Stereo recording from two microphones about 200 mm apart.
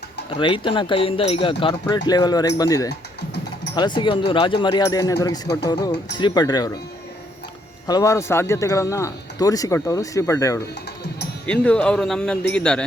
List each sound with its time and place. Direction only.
0.3 s speech: 25° left (ahead or behind)
2.9 s a sound: 55° left (ahead or behind)
3.8 s speech: 20° left (ahead or behind)
7.9 s speech: 15° left (ahead or behind)